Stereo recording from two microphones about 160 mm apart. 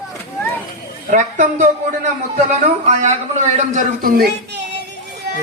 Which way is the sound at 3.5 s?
45° right (ahead or behind).